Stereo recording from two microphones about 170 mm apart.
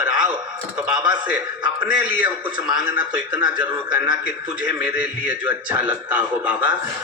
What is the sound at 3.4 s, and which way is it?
Speech, 25° right (ahead or behind).